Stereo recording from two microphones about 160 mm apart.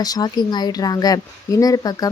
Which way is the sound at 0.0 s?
25° left (ahead or behind).